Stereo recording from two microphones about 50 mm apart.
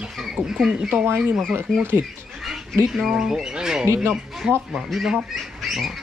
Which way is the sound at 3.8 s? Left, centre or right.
Right.